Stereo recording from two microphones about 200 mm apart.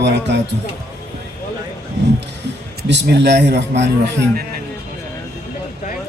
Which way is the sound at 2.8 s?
60° right (ahead or behind).